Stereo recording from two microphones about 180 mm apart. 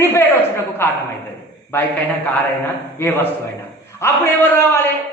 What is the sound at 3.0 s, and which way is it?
A woman's voice, 10° left (ahead or behind).